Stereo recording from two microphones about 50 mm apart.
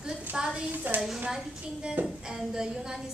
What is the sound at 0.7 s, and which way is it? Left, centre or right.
Speech, right.